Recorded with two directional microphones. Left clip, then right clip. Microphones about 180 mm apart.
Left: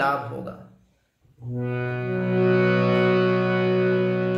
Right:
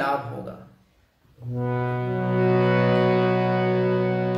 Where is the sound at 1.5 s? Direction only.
15° left (ahead or behind).